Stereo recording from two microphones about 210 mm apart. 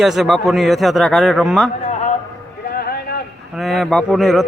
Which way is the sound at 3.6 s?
Centre (ahead or behind).